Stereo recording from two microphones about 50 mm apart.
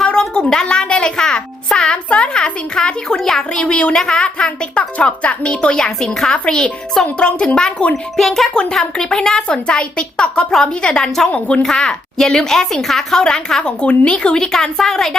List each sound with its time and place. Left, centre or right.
0.0 s a child's voice: centre
8.1 s a woman's voice: centre